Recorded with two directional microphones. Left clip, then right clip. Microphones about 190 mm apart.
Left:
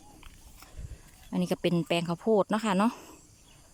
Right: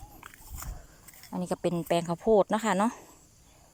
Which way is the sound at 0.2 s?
55° right (ahead or behind).